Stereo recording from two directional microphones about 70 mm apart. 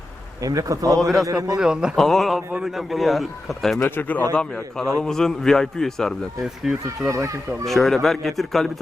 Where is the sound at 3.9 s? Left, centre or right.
Left.